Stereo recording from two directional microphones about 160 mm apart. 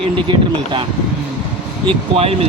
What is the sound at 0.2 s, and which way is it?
Speech, 30° right (ahead or behind).